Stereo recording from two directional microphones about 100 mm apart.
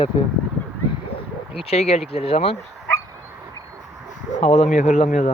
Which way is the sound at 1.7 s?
90° left.